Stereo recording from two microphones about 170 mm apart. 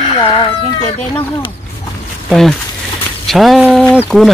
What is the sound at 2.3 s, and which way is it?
Speech, centre (ahead or behind).